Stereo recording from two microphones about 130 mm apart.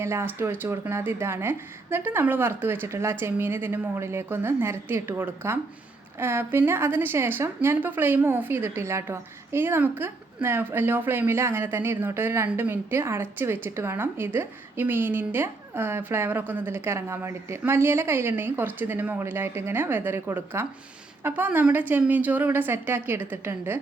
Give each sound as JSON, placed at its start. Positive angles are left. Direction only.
{"t": 0.0, "sound": "a woman's voice", "side_deg": -20}